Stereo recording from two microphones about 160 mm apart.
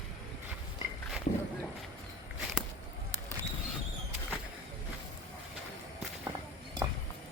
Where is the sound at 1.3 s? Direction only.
50° left (ahead or behind).